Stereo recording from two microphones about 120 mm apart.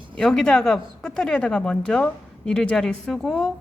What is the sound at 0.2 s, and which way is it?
A woman's voice, 5° left (ahead or behind).